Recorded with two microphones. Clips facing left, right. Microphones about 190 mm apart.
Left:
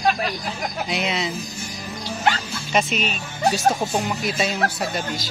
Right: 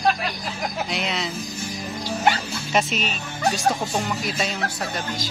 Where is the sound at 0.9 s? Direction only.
Centre (ahead or behind).